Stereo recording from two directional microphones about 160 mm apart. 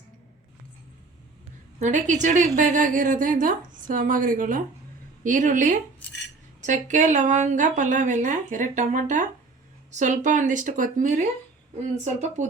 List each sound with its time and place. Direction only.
1.8 s a woman's voice: 50° right (ahead or behind)